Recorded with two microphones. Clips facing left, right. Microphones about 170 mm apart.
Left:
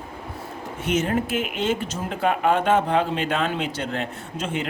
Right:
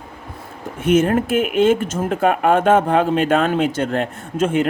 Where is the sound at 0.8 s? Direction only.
50° right (ahead or behind).